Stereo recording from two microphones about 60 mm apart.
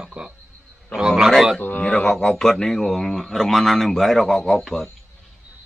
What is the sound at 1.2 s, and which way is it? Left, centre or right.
Speech, centre.